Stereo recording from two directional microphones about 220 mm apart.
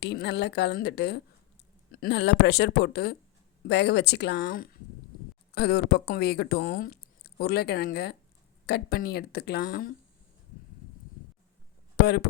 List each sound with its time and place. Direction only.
0.0 s speech: 50° left (ahead or behind)
11.9 s speech: 45° left (ahead or behind)